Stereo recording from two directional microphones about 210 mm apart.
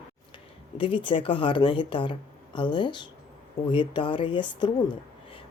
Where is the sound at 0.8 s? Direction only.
25° left (ahead or behind).